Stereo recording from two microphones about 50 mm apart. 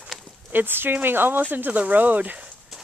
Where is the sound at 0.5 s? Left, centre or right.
Right.